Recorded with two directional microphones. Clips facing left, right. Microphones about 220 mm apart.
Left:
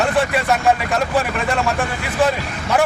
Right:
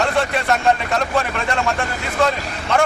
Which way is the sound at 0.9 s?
5° left (ahead or behind).